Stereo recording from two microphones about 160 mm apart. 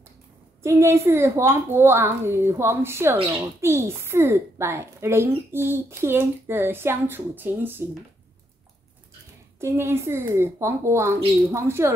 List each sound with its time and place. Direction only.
0.6 s a child's voice: 15° right (ahead or behind)
9.6 s a child's voice: 15° right (ahead or behind)